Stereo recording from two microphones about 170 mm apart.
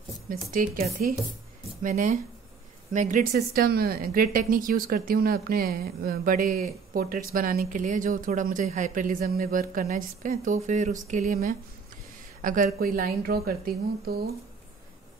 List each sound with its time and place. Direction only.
0.3 s a woman's voice: 55° right (ahead or behind)
3.3 s a woman's voice: 65° right (ahead or behind)